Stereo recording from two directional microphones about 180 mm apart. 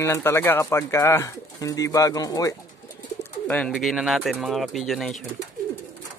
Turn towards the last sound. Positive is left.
turn(degrees=0)  # may be behind; listen again after turning